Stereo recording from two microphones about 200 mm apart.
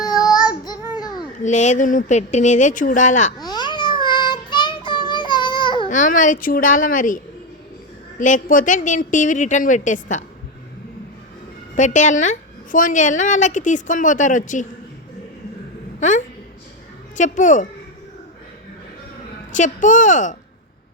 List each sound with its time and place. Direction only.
0.0 s child singing: 20° left (ahead or behind)
1.5 s a woman's voice: 35° left (ahead or behind)
3.4 s child singing: 20° left (ahead or behind)
5.9 s a woman's voice: 40° left (ahead or behind)
8.2 s a woman's voice: 40° left (ahead or behind)
11.8 s a woman's voice: 40° left (ahead or behind)
16.0 s a woman's voice: 40° left (ahead or behind)
19.5 s a woman's voice: 40° left (ahead or behind)